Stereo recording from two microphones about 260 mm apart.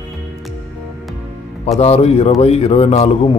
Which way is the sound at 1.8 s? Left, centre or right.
Left.